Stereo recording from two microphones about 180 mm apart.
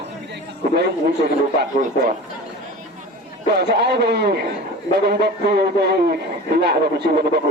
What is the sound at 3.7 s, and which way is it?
Speech, 65° right (ahead or behind).